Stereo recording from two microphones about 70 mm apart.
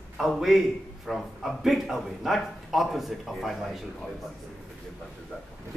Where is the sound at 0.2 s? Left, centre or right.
Centre.